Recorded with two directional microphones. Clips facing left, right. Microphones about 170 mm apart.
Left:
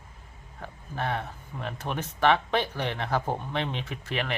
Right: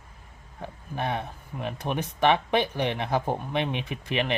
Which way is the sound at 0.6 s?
15° right (ahead or behind).